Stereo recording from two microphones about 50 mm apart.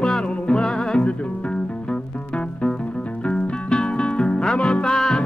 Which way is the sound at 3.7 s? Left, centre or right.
Centre.